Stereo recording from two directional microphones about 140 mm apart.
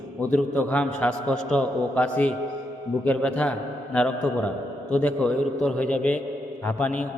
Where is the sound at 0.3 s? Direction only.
10° left (ahead or behind).